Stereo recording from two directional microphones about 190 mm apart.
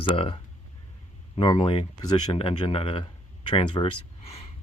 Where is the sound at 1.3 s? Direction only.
25° left (ahead or behind).